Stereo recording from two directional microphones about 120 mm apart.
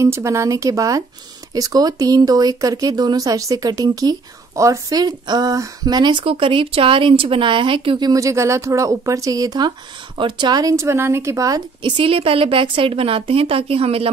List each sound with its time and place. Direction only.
0.0 s speech: 25° right (ahead or behind); by 8.1 s 45° right (ahead or behind)
8.1 s a woman's voice: 25° right (ahead or behind); by 14.1 s 55° right (ahead or behind)